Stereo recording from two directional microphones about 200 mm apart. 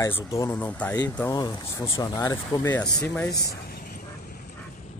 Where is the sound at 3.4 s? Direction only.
50° left (ahead or behind).